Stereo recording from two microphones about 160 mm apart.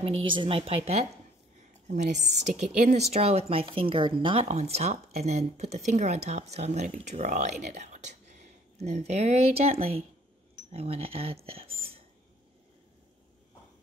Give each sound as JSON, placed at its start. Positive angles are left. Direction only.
{"t": 0.0, "sound": "a woman's voice", "side_deg": -35}